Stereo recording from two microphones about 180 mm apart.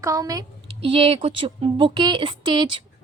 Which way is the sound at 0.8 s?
30° right (ahead or behind).